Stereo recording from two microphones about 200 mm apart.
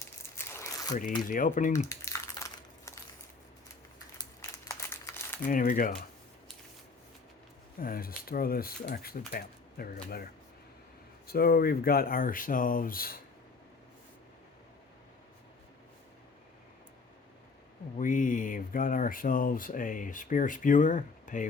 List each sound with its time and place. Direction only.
0.2 s crumpling: 15° left (ahead or behind)
1.3 s speech: 40° left (ahead or behind)
1.9 s a sound: 15° left (ahead or behind)
4.2 s crumpling: 15° left (ahead or behind)
5.5 s speech: 45° left (ahead or behind)
7.8 s speech: 45° left (ahead or behind)
11.3 s speech: 50° left (ahead or behind)
17.9 s speech: 40° left (ahead or behind)